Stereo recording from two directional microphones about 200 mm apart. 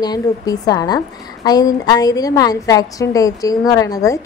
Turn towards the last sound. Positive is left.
turn(degrees=15)  # may be behind; listen again after turning